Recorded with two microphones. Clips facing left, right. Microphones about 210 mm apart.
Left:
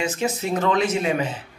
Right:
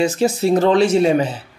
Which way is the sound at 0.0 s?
35° right (ahead or behind).